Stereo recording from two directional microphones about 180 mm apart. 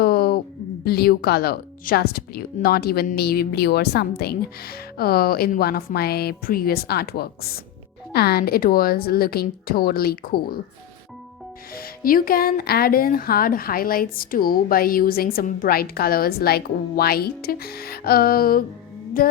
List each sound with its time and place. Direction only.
0.0 s a sound: 60° left (ahead or behind)
0.9 s speech: 60° left (ahead or behind)
11.7 s speech: 55° left (ahead or behind)